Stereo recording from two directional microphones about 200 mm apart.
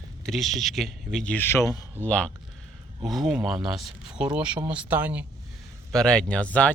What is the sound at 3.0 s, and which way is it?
Speech, centre (ahead or behind).